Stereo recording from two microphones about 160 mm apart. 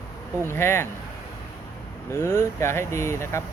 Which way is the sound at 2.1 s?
15° left (ahead or behind).